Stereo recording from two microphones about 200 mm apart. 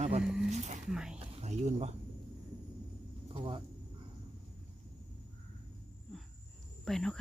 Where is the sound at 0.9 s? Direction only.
5° right (ahead or behind).